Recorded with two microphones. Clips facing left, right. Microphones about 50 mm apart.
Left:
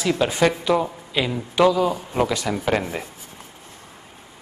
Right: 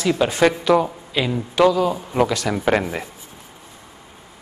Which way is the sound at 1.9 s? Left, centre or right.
Centre.